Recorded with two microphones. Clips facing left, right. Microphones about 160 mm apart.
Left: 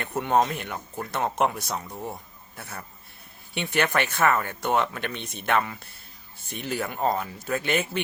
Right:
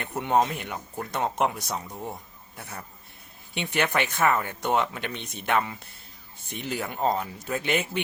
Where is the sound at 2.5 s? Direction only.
15° right (ahead or behind).